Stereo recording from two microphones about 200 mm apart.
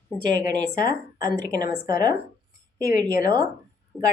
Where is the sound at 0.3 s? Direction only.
20° right (ahead or behind).